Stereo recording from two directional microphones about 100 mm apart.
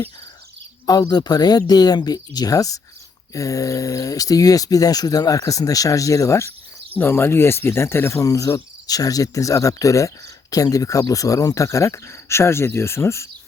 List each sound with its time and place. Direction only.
0.9 s speech: 45° left (ahead or behind); by 13.2 s 25° left (ahead or behind)